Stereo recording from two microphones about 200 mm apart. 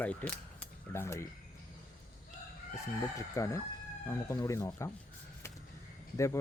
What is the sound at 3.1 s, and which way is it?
Speech, 15° left (ahead or behind).